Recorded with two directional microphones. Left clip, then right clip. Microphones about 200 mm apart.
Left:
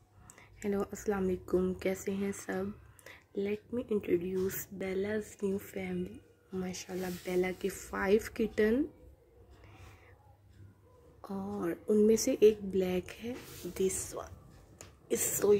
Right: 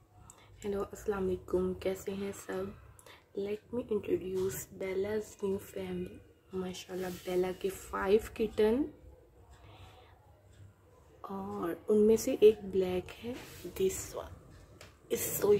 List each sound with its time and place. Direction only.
0.4 s speech: 20° left (ahead or behind)
11.1 s speech: 10° left (ahead or behind)